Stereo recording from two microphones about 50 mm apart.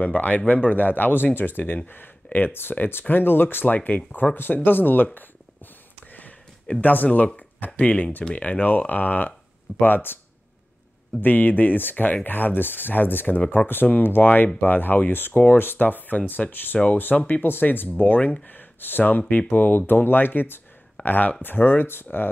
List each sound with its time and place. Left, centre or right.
0.0 s speech: left
6.8 s speech: left
11.1 s speech: left